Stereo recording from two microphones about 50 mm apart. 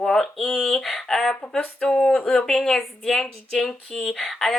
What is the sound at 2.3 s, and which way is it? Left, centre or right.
A woman's voice, centre.